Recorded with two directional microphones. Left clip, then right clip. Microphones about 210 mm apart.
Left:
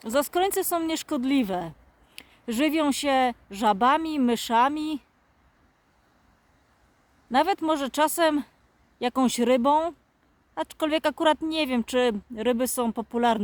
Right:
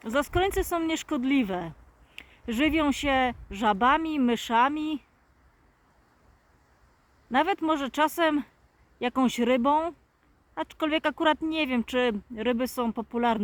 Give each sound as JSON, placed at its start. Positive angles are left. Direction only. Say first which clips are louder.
{"t": 0.0, "sound": "speech", "louder": "left 2 dB", "side_deg": 15}
{"t": 7.3, "sound": "speech", "louder": "left 2 dB", "side_deg": 20}